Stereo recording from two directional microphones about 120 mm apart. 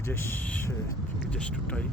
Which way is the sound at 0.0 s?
20° left (ahead or behind).